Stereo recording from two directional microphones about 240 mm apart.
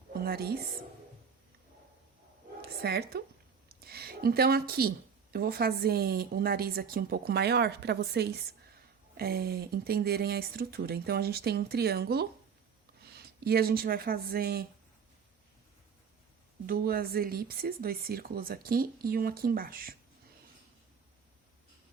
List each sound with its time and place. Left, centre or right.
0.1 s a woman's voice: right
2.6 s a sound: right
3.7 s speech: right
16.6 s speech: right